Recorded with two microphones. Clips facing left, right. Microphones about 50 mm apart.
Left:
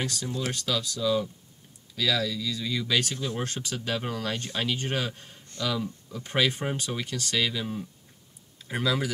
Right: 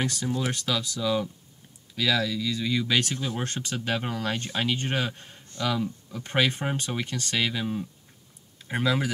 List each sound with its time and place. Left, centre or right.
0.0 s speech: centre
0.7 s speech: right
2.0 s speech: centre
3.4 s speech: right
3.8 s speech: right